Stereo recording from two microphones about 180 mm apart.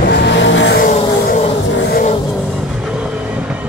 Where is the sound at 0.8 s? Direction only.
45° left (ahead or behind).